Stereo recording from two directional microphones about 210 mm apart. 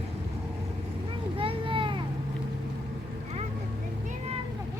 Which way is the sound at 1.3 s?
25° right (ahead or behind).